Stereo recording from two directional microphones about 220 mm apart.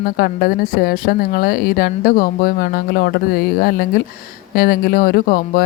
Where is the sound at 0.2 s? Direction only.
40° left (ahead or behind).